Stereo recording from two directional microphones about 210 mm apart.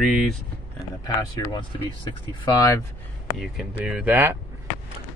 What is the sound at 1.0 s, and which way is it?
Speech, 20° left (ahead or behind).